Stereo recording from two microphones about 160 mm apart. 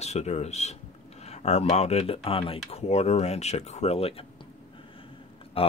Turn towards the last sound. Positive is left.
turn(degrees=35)  # may be behind; listen again after turning